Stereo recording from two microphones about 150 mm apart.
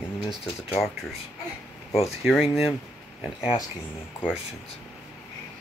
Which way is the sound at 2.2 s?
Centre (ahead or behind).